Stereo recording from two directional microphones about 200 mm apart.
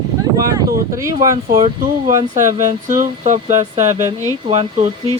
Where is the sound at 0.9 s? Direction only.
15° right (ahead or behind).